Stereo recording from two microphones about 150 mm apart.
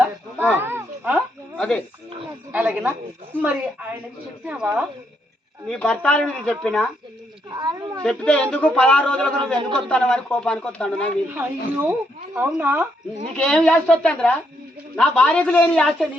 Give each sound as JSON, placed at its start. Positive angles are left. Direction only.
{"t": 0.5, "sound": "a sound", "side_deg": -15}
{"t": 1.5, "sound": "speech", "side_deg": 5}
{"t": 2.5, "sound": "speech", "side_deg": -10}
{"t": 5.6, "sound": "speech", "side_deg": 5}
{"t": 7.5, "sound": "speech", "side_deg": -30}
{"t": 8.0, "sound": "speech", "side_deg": 5}
{"t": 11.3, "sound": "speech", "side_deg": -15}
{"t": 13.3, "sound": "speech", "side_deg": 5}